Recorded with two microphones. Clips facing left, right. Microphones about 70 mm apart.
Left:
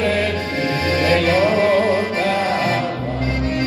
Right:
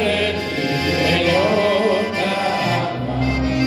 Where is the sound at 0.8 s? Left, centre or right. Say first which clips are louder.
Left 2 dB; left.